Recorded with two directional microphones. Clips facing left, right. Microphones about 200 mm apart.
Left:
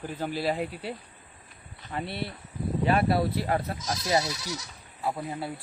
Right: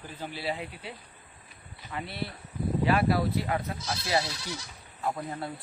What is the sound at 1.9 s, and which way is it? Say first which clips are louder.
Speech: left 3 dB; 45° left (ahead or behind).